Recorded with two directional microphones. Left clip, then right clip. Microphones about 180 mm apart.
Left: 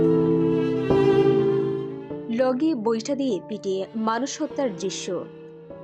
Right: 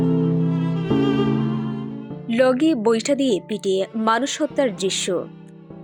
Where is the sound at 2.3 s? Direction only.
20° right (ahead or behind).